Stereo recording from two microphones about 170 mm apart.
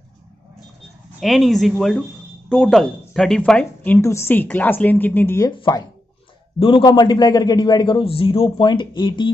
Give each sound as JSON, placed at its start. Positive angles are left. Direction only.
{"t": 1.2, "sound": "a woman's voice", "side_deg": 0}
{"t": 5.5, "sound": "a man's voice", "side_deg": 25}